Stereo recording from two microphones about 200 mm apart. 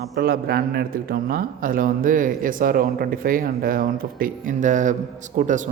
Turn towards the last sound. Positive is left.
turn(degrees=-40)  # may be behind; listen again after turning